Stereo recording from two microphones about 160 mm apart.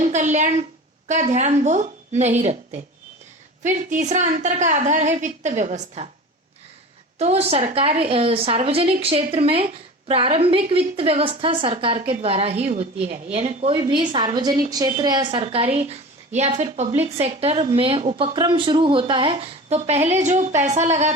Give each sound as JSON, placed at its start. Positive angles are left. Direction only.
{"t": 0.0, "sound": "a woman's voice", "side_deg": -50}
{"t": 7.2, "sound": "a woman's voice", "side_deg": -40}
{"t": 15.4, "sound": "a woman's voice", "side_deg": -40}